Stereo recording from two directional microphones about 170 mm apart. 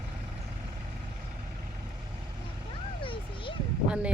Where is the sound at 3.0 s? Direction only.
30° left (ahead or behind).